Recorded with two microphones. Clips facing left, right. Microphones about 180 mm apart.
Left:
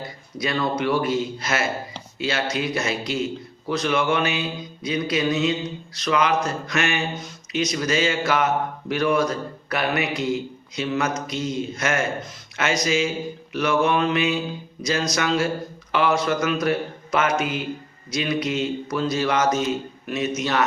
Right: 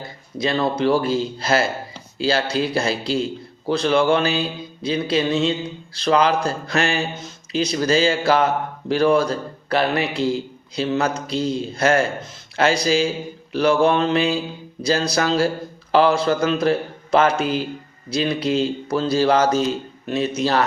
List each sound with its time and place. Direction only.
0.3 s speech: 30° right (ahead or behind)